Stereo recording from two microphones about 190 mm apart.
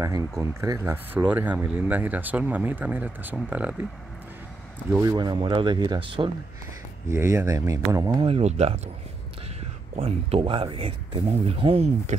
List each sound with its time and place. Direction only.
0.0 s speech: 15° right (ahead or behind)
5.0 s speech: 25° right (ahead or behind)
7.1 s speech: 15° right (ahead or behind)
8.3 s speech: 35° right (ahead or behind)
9.9 s speech: 30° right (ahead or behind)